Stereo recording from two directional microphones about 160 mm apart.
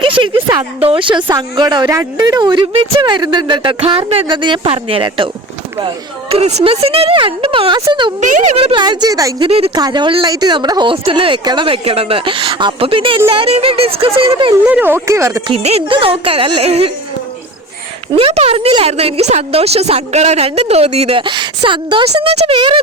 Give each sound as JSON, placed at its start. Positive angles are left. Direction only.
{"t": 0.0, "sound": "a sound", "side_deg": -30}
{"t": 0.8, "sound": "a woman's voice", "side_deg": -35}
{"t": 6.3, "sound": "a woman's voice", "side_deg": -45}
{"t": 8.2, "sound": "speech", "side_deg": -50}
{"t": 8.5, "sound": "a woman's voice", "side_deg": -35}
{"t": 9.5, "sound": "a woman's voice", "side_deg": -35}
{"t": 9.7, "sound": "a woman's voice", "side_deg": -25}
{"t": 14.5, "sound": "speech", "side_deg": -10}
{"t": 15.4, "sound": "a woman's voice", "side_deg": -40}
{"t": 18.1, "sound": "a woman's voice", "side_deg": -35}